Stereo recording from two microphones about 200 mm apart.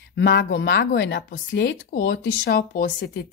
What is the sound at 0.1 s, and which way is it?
A woman's voice, 65° left (ahead or behind).